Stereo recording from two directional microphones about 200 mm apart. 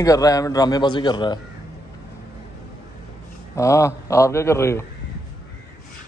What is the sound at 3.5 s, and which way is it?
A man's voice, 15° left (ahead or behind).